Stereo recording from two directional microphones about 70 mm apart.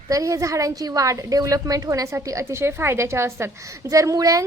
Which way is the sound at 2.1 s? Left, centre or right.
Right.